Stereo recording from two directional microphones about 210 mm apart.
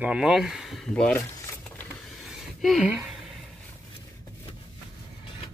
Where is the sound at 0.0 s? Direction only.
5° right (ahead or behind).